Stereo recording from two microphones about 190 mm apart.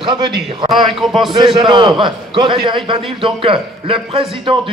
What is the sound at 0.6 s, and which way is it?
Speech, centre (ahead or behind).